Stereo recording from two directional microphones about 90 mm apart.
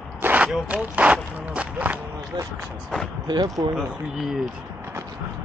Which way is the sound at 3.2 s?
55° right (ahead or behind).